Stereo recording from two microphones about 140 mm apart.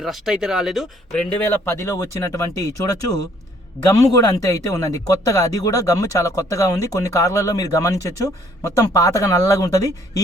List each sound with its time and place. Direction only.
0.0 s speech: centre (ahead or behind)
1.3 s speech: 15° left (ahead or behind)